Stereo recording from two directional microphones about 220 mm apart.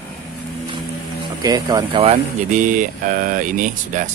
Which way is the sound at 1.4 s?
15° right (ahead or behind).